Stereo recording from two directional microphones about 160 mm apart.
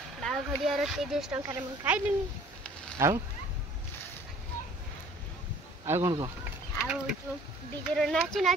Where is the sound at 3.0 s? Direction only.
15° right (ahead or behind).